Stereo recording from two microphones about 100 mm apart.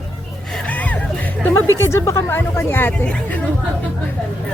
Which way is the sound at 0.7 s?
15° left (ahead or behind).